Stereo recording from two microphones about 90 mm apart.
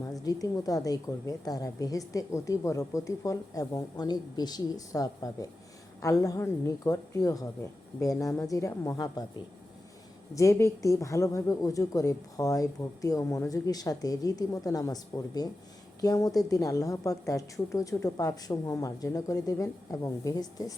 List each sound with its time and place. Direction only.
0.1 s a woman's voice: 40° left (ahead or behind)
8.4 s a woman's voice: 35° left (ahead or behind)
10.3 s a woman's voice: 35° left (ahead or behind)